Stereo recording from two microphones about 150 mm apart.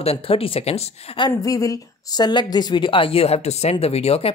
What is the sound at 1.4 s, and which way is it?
A woman's voice, 20° left (ahead or behind).